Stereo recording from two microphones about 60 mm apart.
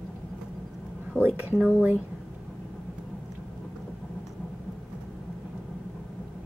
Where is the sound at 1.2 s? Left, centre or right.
Right.